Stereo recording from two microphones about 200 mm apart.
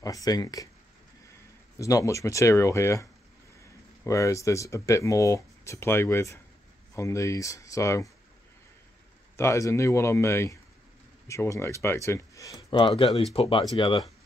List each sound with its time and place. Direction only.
0.0 s speech: 15° left (ahead or behind)
1.8 s speech: 15° left (ahead or behind)
9.4 s speech: 15° left (ahead or behind)